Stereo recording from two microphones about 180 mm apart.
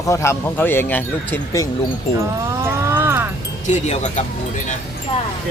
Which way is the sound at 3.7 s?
40° left (ahead or behind).